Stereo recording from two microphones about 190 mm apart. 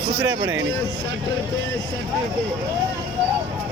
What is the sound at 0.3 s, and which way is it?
Speech, 90° right.